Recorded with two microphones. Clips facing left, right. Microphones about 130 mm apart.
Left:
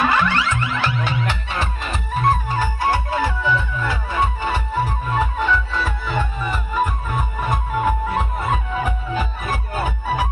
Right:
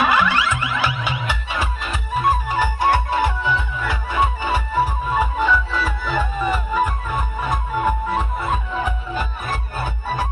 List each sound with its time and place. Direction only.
0.0 s music: 10° right (ahead or behind)
2.6 s music: 20° right (ahead or behind)
4.4 s music: 5° right (ahead or behind)
7.5 s music: centre (ahead or behind)